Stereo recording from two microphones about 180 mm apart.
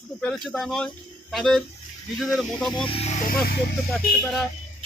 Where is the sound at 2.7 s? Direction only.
30° left (ahead or behind).